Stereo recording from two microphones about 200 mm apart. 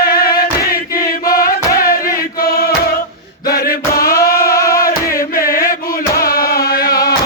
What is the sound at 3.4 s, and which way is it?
Music, 50° left (ahead or behind).